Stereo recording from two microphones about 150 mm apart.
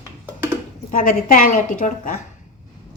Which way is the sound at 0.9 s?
55° left (ahead or behind).